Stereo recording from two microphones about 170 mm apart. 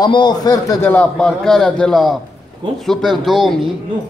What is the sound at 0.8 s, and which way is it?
A man's voice, 10° left (ahead or behind).